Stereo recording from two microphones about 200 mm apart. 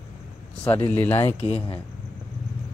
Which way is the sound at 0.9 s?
10° left (ahead or behind).